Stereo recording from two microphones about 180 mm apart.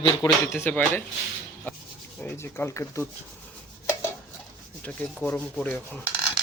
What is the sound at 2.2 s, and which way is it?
Speech, 15° left (ahead or behind).